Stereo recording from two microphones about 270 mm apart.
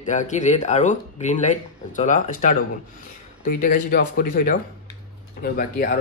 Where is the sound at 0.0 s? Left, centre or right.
Left.